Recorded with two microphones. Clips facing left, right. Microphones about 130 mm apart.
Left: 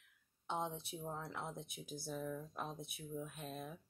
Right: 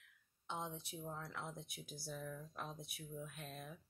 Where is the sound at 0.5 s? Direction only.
25° left (ahead or behind).